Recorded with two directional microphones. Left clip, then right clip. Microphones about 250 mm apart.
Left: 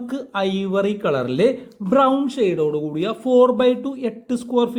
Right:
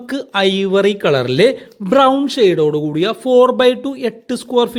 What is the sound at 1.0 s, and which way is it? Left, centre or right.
Speech, right.